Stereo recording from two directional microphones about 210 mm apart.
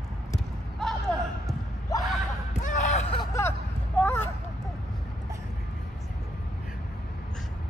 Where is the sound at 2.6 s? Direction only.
35° left (ahead or behind).